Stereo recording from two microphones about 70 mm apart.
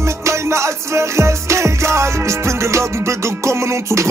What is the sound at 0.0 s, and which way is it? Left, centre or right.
Music, right.